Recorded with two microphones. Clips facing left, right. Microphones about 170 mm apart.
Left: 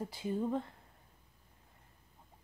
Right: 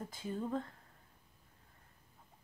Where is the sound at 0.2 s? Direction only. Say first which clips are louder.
Left 3 dB; 15° left (ahead or behind).